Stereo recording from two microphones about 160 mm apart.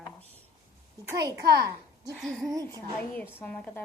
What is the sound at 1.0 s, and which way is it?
Speech, 20° right (ahead or behind).